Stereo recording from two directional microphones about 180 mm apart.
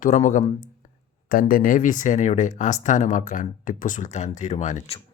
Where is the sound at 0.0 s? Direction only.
45° left (ahead or behind).